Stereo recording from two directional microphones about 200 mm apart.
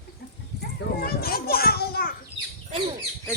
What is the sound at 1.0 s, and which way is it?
Children playing, 50° left (ahead or behind).